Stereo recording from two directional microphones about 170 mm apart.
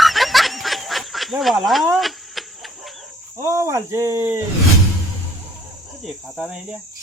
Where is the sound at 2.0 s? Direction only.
Centre (ahead or behind).